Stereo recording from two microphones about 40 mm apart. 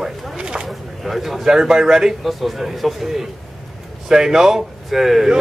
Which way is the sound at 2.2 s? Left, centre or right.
Centre.